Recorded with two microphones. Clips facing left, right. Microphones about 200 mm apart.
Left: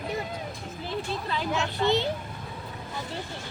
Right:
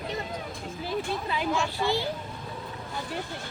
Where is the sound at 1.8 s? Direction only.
20° left (ahead or behind).